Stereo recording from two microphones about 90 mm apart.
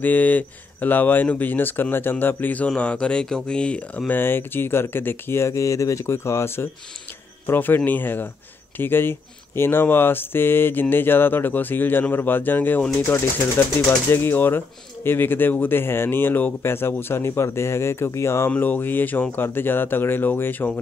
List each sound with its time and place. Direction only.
0.0 s speech: 20° left (ahead or behind)
4.1 s speech: 25° left (ahead or behind)
18.5 s speech: 20° left (ahead or behind)